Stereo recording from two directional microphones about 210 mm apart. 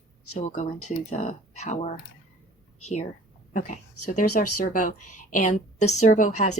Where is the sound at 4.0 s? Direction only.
90° left.